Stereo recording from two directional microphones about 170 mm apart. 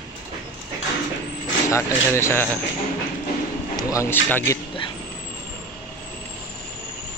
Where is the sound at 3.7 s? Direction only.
20° left (ahead or behind).